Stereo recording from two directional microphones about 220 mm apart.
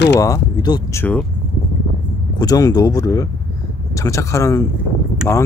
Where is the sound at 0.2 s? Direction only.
15° left (ahead or behind).